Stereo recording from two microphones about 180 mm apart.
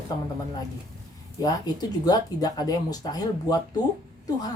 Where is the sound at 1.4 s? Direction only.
20° left (ahead or behind).